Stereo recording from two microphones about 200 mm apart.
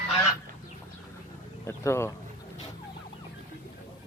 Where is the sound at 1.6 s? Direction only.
15° left (ahead or behind).